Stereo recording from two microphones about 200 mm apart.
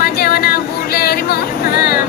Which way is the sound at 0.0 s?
50° left (ahead or behind).